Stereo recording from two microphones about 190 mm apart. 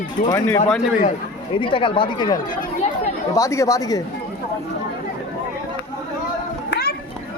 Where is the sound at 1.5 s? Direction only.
25° left (ahead or behind).